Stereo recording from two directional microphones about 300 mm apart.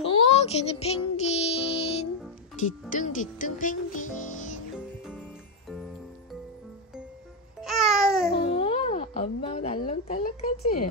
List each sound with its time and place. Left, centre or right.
0.0 s music: centre
2.9 s speech: left
7.6 s babbling: centre
8.4 s a sound: centre
10.6 s speech: left